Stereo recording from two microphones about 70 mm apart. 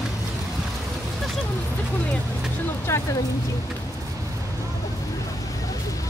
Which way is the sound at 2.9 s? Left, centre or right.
Left.